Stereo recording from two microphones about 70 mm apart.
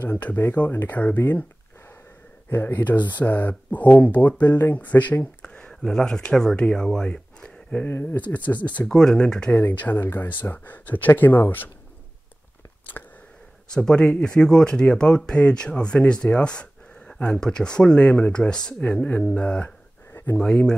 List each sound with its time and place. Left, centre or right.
0.0 s speech: left
2.5 s speech: left
7.8 s speech: left
8.2 s speech: left
8.8 s speech: centre
9.6 s speech: left
13.0 s a sound: left
13.7 s speech: centre
20.1 s a sound: left
20.3 s speech: centre